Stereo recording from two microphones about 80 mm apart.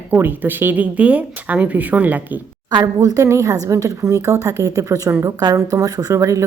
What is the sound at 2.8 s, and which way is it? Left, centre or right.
Speech, right.